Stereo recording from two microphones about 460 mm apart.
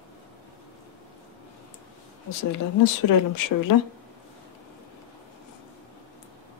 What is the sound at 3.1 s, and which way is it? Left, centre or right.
Speech, left.